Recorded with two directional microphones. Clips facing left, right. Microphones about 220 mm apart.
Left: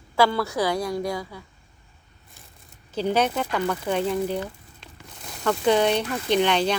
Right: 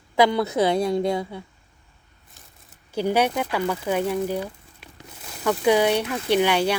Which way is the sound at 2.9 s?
10° right (ahead or behind).